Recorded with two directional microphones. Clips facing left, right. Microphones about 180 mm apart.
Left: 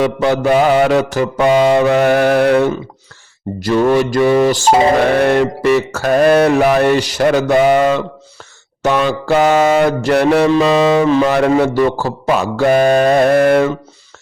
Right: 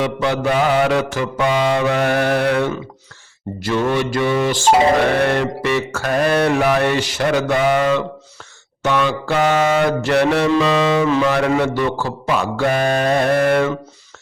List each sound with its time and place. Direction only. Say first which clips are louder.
0.0 s mantra: left 5 dB; 40° left (ahead or behind)